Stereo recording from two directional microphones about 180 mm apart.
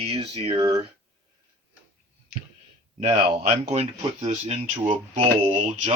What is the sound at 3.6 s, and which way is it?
Speech, 35° right (ahead or behind).